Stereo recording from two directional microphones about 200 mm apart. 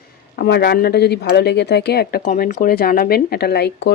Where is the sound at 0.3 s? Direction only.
55° left (ahead or behind).